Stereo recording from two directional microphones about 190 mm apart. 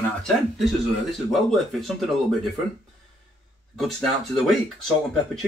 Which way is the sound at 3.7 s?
Centre (ahead or behind).